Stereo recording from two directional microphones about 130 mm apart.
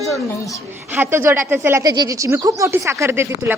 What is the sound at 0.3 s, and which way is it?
Speech, 25° left (ahead or behind).